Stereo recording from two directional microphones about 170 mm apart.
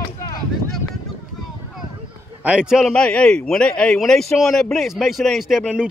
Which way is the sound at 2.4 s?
5° right (ahead or behind).